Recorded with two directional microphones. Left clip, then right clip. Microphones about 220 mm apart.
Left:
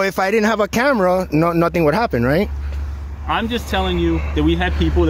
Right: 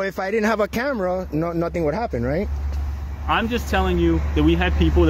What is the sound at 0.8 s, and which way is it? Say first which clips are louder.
Speech: left 8 dB; 35° left (ahead or behind).